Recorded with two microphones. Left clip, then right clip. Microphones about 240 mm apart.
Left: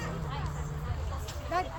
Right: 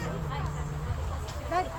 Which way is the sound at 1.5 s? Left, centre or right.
Centre.